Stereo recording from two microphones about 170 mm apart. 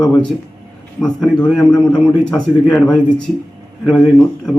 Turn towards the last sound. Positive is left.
turn(degrees=5)  # may be behind; listen again after turning